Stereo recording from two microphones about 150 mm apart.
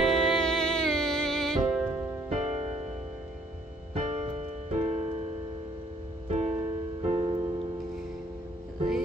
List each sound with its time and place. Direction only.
0.0 s music: centre (ahead or behind)
2.2 s music: 45° right (ahead or behind)
3.9 s music: 45° right (ahead or behind)